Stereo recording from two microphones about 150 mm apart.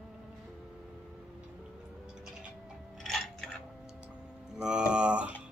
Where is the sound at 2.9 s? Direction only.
Centre (ahead or behind).